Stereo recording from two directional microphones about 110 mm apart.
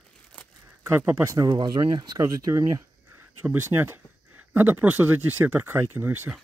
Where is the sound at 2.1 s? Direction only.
30° right (ahead or behind).